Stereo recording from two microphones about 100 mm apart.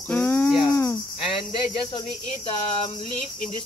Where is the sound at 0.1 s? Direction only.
20° left (ahead or behind).